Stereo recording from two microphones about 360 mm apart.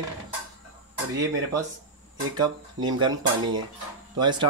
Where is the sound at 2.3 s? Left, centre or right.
Centre.